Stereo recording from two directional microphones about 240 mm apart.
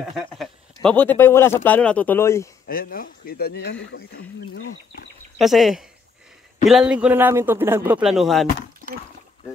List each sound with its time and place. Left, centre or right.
0.0 s a man's voice: centre
2.7 s speech: left
5.4 s a man's voice: centre